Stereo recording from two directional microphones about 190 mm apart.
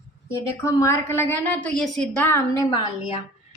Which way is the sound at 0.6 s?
15° left (ahead or behind).